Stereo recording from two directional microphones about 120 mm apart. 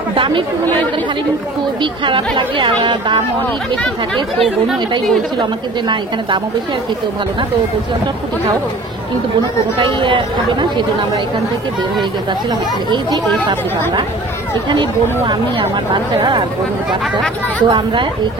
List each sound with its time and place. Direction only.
0.1 s speech: 45° right (ahead or behind)
1.8 s speech: 45° right (ahead or behind)
3.7 s speech: 5° left (ahead or behind)
5.4 s speech: 40° right (ahead or behind)
9.8 s speech: 45° right (ahead or behind)
12.0 s speech: 35° right (ahead or behind)
14.7 s speech: 40° right (ahead or behind)
17.6 s speech: 40° right (ahead or behind)